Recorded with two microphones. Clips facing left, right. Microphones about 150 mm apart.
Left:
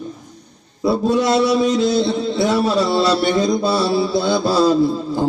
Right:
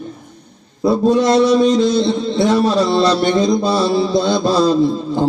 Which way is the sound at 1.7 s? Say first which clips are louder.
Right 3 dB; 45° right (ahead or behind).